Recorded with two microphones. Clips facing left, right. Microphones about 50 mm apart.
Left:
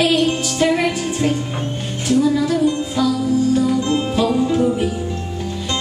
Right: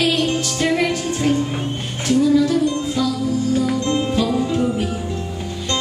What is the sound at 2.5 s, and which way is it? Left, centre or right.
Music, centre.